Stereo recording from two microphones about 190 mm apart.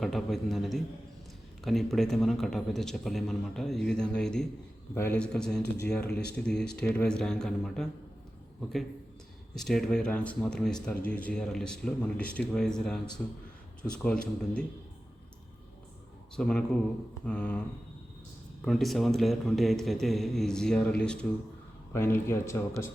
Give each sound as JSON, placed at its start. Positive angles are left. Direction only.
{"t": 0.0, "sound": "speech", "side_deg": 0}
{"t": 5.6, "sound": "speech", "side_deg": 60}
{"t": 5.9, "sound": "speech", "side_deg": 5}
{"t": 9.6, "sound": "a man's voice", "side_deg": 0}
{"t": 16.3, "sound": "a man's voice", "side_deg": 5}
{"t": 18.6, "sound": "a man's voice", "side_deg": 0}